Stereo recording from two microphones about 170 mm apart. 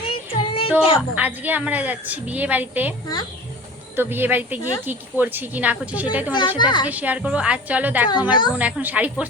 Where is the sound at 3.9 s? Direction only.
10° right (ahead or behind).